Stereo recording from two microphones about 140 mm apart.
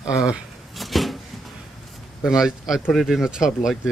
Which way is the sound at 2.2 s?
5° right (ahead or behind).